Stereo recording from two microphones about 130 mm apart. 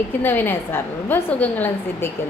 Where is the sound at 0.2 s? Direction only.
15° left (ahead or behind).